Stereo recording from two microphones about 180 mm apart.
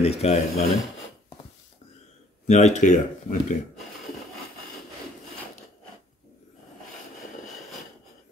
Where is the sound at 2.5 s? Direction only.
40° left (ahead or behind).